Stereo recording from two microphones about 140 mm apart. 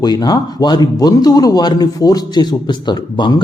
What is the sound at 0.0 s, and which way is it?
A man's voice, 30° left (ahead or behind).